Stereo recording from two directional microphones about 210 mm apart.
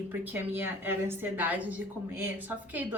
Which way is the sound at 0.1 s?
10° right (ahead or behind).